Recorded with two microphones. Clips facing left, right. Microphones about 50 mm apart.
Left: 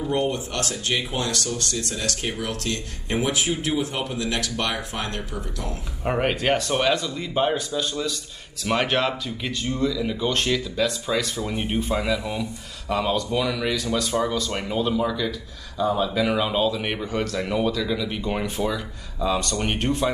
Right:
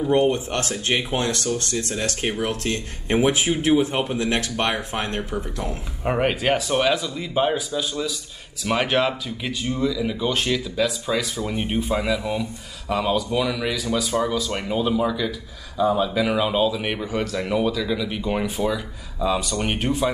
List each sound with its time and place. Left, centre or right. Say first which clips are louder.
0.3 s speech: right 3 dB; right
6.0 s speech: right 1 dB; centre